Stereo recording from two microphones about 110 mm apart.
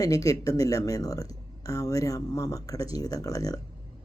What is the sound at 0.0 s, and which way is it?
Speech, 30° left (ahead or behind).